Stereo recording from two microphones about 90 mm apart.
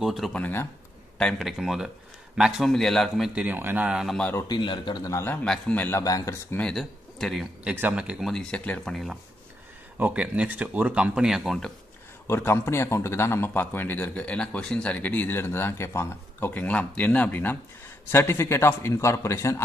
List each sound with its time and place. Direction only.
0.0 s a man's voice: centre (ahead or behind)
0.3 s speech: 15° left (ahead or behind)
1.1 s a man's voice: 5° left (ahead or behind)
1.6 s a man's voice: 5° right (ahead or behind)
2.7 s a man's voice: 5° left (ahead or behind)
3.3 s speech: 20° right (ahead or behind)
4.5 s a man's voice: 60° left (ahead or behind)
5.4 s speech: 15° left (ahead or behind)
5.9 s speech: 40° left (ahead or behind)
6.6 s speech: centre (ahead or behind)
7.7 s speech: 20° right (ahead or behind)
8.2 s a man's voice: 5° left (ahead or behind)
9.9 s speech: 15° right (ahead or behind); by 11.7 s centre (ahead or behind)
12.3 s speech: 30° left (ahead or behind)